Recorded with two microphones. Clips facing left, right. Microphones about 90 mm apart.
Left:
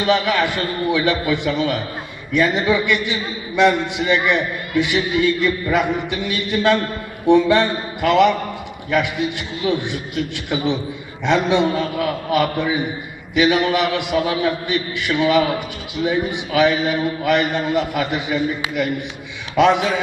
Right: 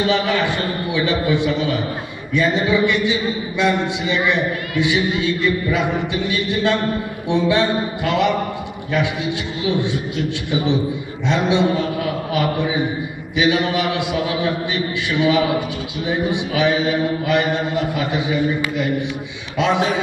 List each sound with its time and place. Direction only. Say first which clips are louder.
0.0 s a man's voice: left 1 dB; 55° left (ahead or behind)